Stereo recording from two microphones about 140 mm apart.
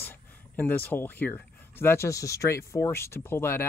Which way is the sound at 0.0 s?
15° left (ahead or behind).